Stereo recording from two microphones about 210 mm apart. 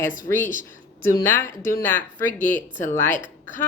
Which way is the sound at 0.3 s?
40° left (ahead or behind).